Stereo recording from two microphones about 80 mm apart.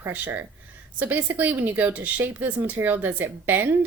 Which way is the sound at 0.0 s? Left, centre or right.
Right.